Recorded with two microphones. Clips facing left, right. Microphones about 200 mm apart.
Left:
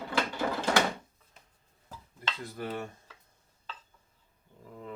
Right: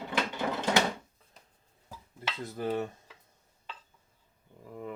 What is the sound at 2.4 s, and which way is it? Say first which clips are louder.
Speech: right 6 dB; 20° right (ahead or behind).